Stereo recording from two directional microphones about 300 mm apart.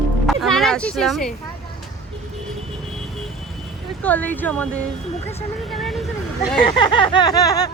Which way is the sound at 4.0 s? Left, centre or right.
Centre.